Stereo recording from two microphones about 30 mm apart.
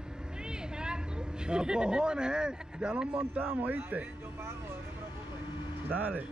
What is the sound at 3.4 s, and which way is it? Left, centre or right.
Speech, right.